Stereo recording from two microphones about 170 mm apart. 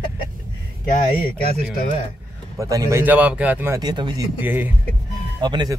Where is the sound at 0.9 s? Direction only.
60° left (ahead or behind).